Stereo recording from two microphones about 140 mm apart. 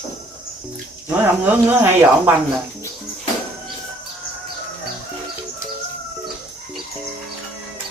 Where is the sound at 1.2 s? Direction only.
15° right (ahead or behind).